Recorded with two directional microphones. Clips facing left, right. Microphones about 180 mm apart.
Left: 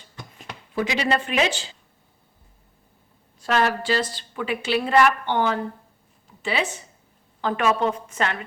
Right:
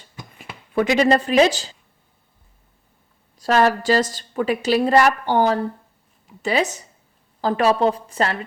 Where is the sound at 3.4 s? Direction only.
40° right (ahead or behind).